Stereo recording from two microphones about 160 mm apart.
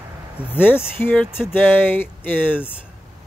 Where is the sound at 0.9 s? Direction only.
10° left (ahead or behind).